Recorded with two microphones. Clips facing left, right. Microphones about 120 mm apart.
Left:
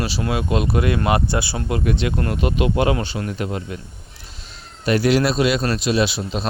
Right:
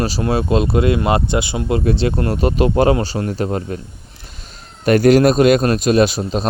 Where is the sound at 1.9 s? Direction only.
30° right (ahead or behind).